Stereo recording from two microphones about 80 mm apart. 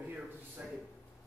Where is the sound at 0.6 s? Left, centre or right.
Centre.